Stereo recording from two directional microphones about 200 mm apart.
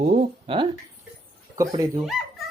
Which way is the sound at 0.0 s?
35° right (ahead or behind).